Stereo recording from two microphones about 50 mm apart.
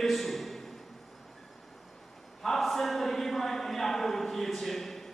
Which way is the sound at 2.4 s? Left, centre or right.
Centre.